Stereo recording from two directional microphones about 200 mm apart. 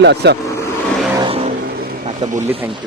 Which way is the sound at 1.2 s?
25° right (ahead or behind).